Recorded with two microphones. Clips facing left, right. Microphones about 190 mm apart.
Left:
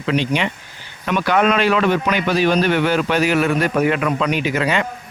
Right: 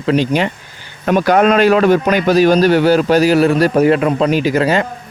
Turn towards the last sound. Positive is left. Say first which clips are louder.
# right 6 dB
turn(degrees=-35)  # may be behind; listen again after turning